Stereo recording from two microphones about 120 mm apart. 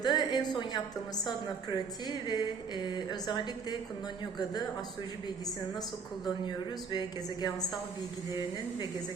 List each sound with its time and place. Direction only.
0.0 s a woman's voice: 35° left (ahead or behind)
6.9 s a woman's voice: 35° left (ahead or behind)